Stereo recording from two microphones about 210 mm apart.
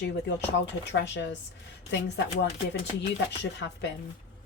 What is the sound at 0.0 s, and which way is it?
A woman's voice, 55° left (ahead or behind).